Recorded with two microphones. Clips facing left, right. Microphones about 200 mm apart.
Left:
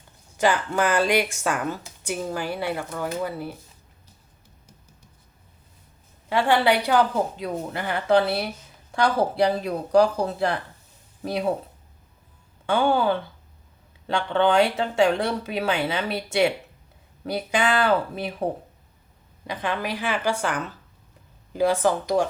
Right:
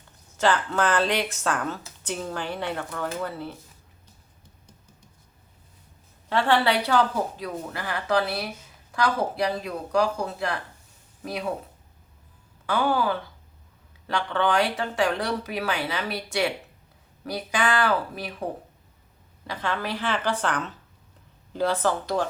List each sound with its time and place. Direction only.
0.3 s a woman's voice: 15° left (ahead or behind)
6.2 s speech: 15° left (ahead or behind); by 11.5 s 30° left (ahead or behind)
12.6 s speech: 25° left (ahead or behind)
19.5 s a woman's voice: 15° left (ahead or behind)